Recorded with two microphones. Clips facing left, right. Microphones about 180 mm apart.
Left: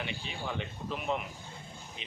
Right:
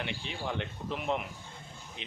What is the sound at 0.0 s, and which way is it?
Speech, 70° right (ahead or behind).